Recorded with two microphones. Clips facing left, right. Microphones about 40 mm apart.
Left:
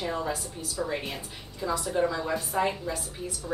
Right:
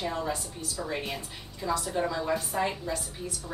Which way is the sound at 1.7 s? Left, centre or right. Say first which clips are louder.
Even; centre.